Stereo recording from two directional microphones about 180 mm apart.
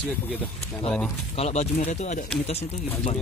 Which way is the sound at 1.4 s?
40° left (ahead or behind).